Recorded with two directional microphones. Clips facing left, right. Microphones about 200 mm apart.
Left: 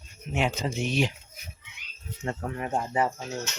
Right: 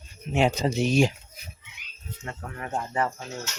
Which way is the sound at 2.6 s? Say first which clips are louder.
Even; 15° left (ahead or behind).